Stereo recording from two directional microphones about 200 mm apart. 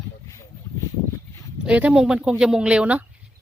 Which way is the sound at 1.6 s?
5° right (ahead or behind).